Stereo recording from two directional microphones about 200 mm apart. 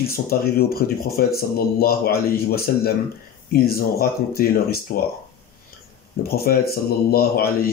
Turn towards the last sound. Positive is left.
turn(degrees=50)  # may be behind; listen again after turning